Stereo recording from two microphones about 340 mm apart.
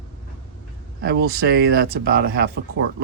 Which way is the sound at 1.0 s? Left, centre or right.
Right.